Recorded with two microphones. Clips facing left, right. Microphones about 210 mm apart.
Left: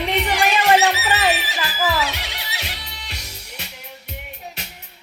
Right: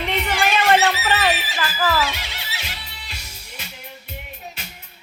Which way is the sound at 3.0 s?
65° left (ahead or behind).